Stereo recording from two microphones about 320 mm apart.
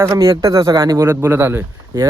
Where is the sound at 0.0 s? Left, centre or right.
Centre.